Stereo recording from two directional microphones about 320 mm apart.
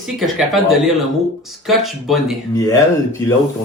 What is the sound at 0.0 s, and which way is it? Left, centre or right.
Speech, centre.